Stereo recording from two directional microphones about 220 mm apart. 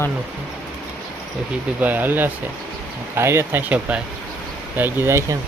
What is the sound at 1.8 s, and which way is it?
Speech, 10° right (ahead or behind).